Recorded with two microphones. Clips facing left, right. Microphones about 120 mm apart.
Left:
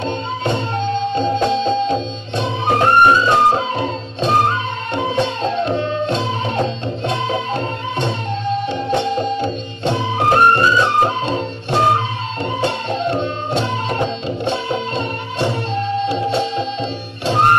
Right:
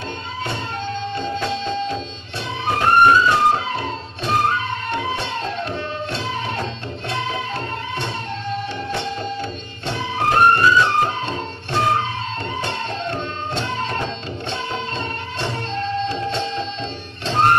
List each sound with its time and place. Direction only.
1.1 s music: 20° left (ahead or behind)